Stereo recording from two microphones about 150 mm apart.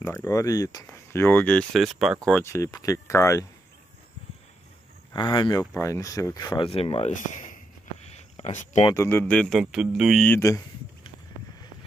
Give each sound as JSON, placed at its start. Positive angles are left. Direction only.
{"t": 0.0, "sound": "speech", "side_deg": 20}
{"t": 2.4, "sound": "speech", "side_deg": 20}
{"t": 5.1, "sound": "speech", "side_deg": 30}
{"t": 6.7, "sound": "speech", "side_deg": 40}
{"t": 7.2, "sound": "a sound", "side_deg": 60}
{"t": 8.9, "sound": "speech", "side_deg": 20}
{"t": 9.2, "sound": "speech", "side_deg": 5}
{"t": 10.2, "sound": "speech", "side_deg": 15}